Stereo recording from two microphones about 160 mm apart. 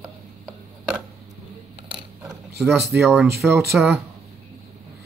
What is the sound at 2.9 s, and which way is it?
Speech, centre (ahead or behind).